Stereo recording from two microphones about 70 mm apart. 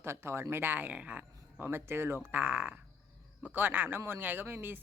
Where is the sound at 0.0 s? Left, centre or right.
Right.